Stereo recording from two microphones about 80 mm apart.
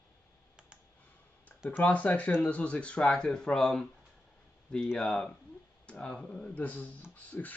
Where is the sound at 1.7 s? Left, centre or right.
Centre.